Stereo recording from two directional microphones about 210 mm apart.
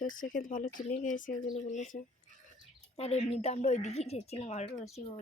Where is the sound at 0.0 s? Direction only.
40° left (ahead or behind).